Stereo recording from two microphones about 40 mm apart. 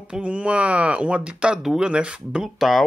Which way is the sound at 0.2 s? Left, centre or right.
Right.